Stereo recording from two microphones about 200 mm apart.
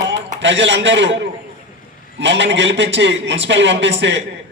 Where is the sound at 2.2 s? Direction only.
65° right (ahead or behind).